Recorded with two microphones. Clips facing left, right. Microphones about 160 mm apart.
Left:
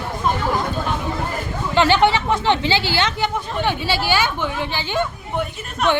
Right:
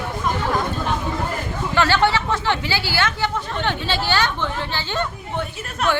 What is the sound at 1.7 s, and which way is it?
Speech, 15° left (ahead or behind).